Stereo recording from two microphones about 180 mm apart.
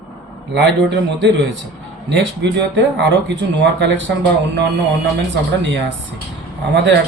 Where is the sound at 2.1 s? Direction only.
75° right (ahead or behind).